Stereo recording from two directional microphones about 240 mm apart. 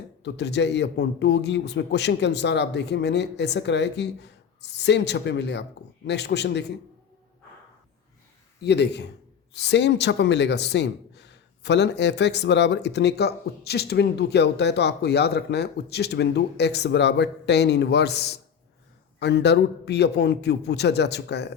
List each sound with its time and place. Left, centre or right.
0.2 s speech: left
8.6 s speech: left